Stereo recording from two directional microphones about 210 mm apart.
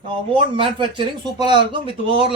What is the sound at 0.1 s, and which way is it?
Speech, 25° right (ahead or behind).